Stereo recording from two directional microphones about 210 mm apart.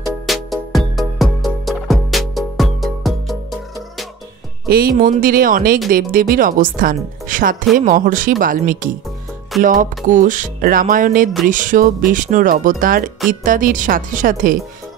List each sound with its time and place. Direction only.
0.3 s music: centre (ahead or behind)
4.6 s speech: 45° right (ahead or behind)